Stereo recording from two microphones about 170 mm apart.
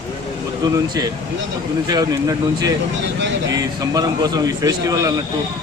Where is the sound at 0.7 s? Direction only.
20° right (ahead or behind).